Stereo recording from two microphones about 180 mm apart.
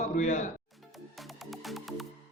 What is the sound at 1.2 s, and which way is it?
Music, centre (ahead or behind).